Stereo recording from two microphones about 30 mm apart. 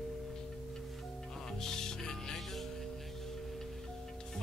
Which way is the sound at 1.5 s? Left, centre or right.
Centre.